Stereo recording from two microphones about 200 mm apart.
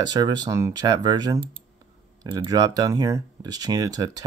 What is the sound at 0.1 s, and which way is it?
Speech, 20° right (ahead or behind).